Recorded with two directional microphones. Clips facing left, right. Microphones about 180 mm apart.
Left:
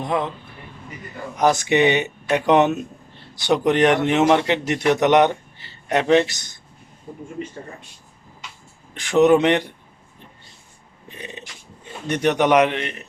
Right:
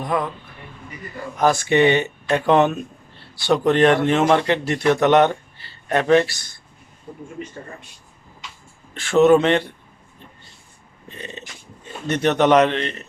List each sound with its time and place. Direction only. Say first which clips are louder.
0.0 s a man's voice: even; 25° left (ahead or behind)
1.4 s a man's voice: right 1 dB; 20° left (ahead or behind)
9.0 s a man's voice: right 1 dB; 15° left (ahead or behind)
11.1 s a sound: right 1 dB; 15° left (ahead or behind)
12.0 s a man's voice: right 1 dB; 10° left (ahead or behind)